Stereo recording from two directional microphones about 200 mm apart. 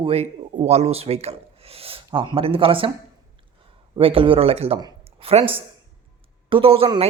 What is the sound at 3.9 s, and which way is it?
Speech, 25° right (ahead or behind).